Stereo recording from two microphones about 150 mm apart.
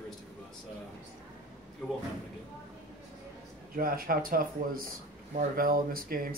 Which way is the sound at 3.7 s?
75° right (ahead or behind).